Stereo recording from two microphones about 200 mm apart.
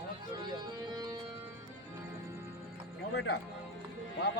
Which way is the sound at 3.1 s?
55° left (ahead or behind).